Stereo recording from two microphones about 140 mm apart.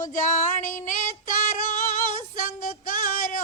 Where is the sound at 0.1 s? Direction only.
65° left (ahead or behind).